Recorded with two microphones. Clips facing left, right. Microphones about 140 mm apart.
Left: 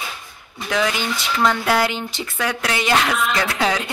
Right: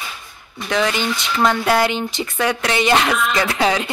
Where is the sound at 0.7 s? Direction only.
5° left (ahead or behind).